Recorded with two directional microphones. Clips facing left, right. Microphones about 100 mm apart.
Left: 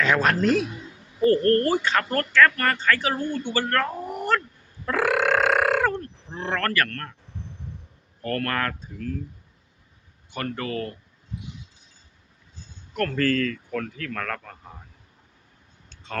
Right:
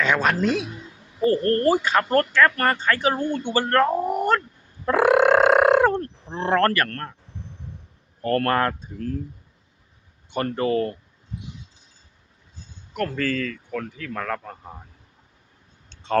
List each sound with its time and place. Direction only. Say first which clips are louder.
0.0 s speech: even; centre (ahead or behind)
1.2 s speech: even; 25° right (ahead or behind)
1.7 s speech: right 2 dB; 10° right (ahead or behind)
2.4 s speech: right 1 dB; 25° right (ahead or behind)
4.9 s burping: right 6 dB; 20° right (ahead or behind)
6.2 s speech: right 7 dB; 30° right (ahead or behind)
8.2 s speech: right 6 dB; 30° right (ahead or behind)
10.3 s speech: right 7 dB; 30° right (ahead or behind)
13.1 s speech: left 2 dB; 5° right (ahead or behind)